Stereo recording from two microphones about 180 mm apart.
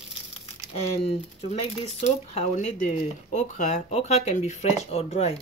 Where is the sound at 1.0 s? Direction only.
35° left (ahead or behind).